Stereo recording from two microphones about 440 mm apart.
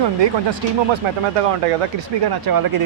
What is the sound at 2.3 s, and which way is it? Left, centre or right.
Speech, right.